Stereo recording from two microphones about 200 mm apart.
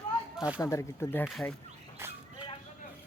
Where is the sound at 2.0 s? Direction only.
10° right (ahead or behind).